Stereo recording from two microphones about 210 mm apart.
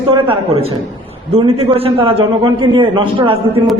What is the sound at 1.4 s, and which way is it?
A man's voice, 25° right (ahead or behind).